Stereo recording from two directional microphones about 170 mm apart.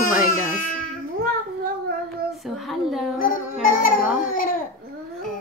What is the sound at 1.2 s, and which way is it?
Cat, 60° right (ahead or behind).